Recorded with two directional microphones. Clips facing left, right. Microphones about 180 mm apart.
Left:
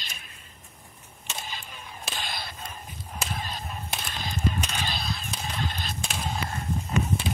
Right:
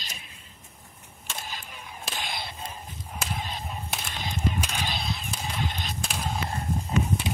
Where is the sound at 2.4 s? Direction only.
25° right (ahead or behind).